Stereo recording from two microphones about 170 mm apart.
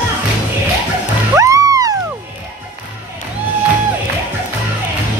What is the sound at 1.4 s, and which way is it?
Music, 20° right (ahead or behind).